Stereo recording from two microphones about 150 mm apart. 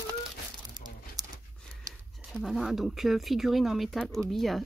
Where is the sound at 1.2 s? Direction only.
25° right (ahead or behind).